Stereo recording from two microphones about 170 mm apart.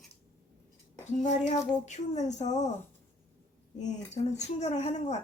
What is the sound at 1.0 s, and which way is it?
Speech, 45° left (ahead or behind).